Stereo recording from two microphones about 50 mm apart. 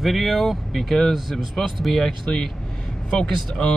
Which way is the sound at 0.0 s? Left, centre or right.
Centre.